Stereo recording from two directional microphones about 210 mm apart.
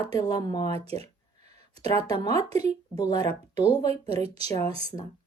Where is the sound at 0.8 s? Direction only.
30° right (ahead or behind).